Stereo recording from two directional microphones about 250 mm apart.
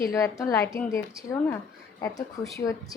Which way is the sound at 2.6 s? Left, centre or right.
Centre.